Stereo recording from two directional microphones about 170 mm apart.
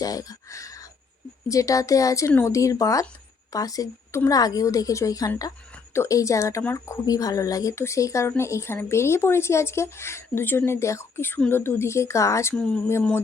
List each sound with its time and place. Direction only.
0.0 s a sound: 20° left (ahead or behind)
1.5 s a woman's voice: 20° left (ahead or behind)
12.5 s a woman's voice: 5° left (ahead or behind)